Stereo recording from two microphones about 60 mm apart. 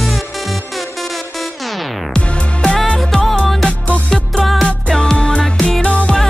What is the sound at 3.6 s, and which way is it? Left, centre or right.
Music, left.